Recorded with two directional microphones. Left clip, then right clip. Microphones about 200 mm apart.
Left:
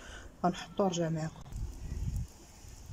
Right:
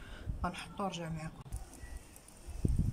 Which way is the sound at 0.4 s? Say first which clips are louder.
Left 7 dB; 35° left (ahead or behind).